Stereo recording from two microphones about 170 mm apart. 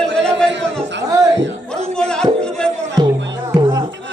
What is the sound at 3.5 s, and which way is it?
Music, 25° right (ahead or behind).